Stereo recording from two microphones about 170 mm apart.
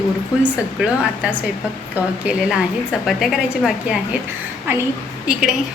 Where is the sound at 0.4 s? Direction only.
5° right (ahead or behind).